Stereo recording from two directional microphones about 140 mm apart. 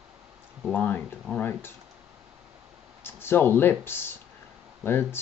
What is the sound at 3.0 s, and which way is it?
Speech, 15° left (ahead or behind).